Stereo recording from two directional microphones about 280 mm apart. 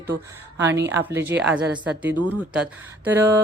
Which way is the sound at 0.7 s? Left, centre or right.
Right.